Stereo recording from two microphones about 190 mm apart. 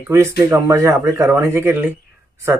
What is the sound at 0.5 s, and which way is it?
Speech, 15° right (ahead or behind).